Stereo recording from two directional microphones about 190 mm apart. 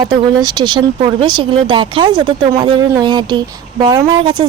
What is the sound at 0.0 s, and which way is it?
Speech, 20° right (ahead or behind).